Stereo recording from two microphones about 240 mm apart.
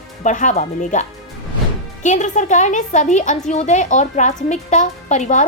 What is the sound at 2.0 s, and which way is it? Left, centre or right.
A woman's voice, left.